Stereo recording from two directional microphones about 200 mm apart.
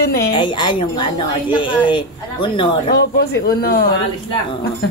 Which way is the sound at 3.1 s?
50° left (ahead or behind).